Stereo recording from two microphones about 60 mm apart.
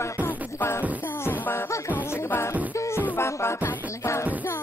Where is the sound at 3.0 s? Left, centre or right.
Left.